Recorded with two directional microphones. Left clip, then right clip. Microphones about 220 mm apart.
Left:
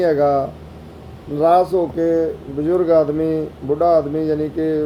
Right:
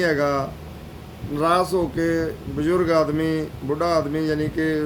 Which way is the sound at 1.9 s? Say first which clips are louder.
Left 5 dB; 90° right.